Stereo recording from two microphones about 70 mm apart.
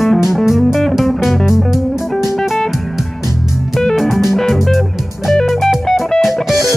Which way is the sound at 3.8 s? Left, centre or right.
Centre.